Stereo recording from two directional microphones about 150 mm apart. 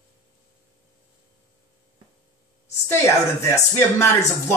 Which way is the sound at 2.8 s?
15° left (ahead or behind).